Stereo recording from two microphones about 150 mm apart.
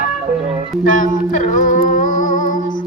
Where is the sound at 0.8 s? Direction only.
60° left (ahead or behind).